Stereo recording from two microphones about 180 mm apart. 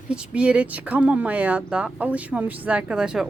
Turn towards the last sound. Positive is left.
turn(degrees=-5)  # may be behind; listen again after turning